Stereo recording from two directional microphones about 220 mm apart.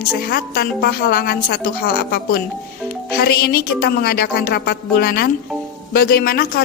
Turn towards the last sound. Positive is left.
turn(degrees=45)  # may be behind; listen again after turning